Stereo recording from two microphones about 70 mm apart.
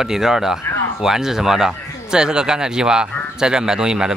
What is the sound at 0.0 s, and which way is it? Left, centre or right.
Speech, centre.